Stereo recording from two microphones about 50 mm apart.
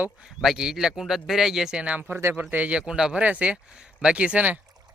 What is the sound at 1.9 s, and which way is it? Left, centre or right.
Speech, right.